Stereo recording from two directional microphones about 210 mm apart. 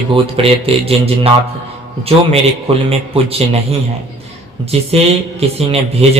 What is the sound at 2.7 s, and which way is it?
A man's voice, 25° right (ahead or behind).